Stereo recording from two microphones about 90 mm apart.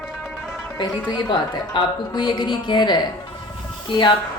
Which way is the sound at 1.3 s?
65° left (ahead or behind).